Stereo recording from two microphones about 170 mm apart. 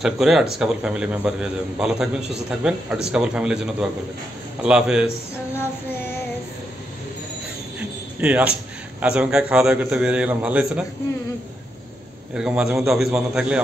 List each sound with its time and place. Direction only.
0.0 s a man's voice: centre (ahead or behind)
4.6 s a man's voice: 5° right (ahead or behind)
8.2 s a man's voice: 5° right (ahead or behind)
12.4 s a man's voice: 5° right (ahead or behind)